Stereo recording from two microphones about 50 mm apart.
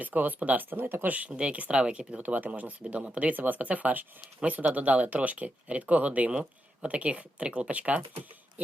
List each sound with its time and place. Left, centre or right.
0.0 s speech: right
1.0 s speech: right